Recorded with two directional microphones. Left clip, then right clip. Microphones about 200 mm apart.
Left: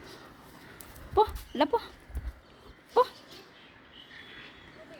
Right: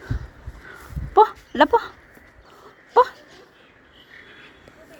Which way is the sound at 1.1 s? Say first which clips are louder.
Right 10 dB; 30° right (ahead or behind).